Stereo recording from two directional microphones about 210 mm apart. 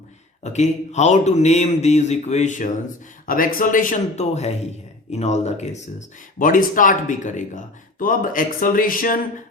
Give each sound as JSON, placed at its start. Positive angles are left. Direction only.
{"t": 0.4, "sound": "speech", "side_deg": 35}